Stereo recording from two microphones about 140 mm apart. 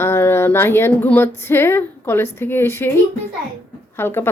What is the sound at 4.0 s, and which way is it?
Speech, 15° left (ahead or behind).